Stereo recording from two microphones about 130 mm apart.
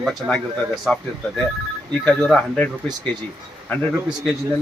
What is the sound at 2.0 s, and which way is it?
Speech, 10° left (ahead or behind).